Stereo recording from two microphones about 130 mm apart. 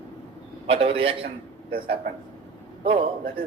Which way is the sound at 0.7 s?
50° right (ahead or behind).